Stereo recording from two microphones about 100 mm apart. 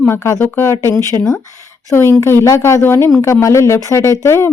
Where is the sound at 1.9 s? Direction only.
25° left (ahead or behind).